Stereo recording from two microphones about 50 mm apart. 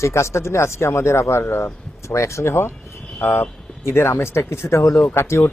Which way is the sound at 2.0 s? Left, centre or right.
Left.